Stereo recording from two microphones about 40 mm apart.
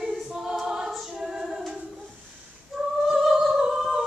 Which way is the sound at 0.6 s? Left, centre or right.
Centre.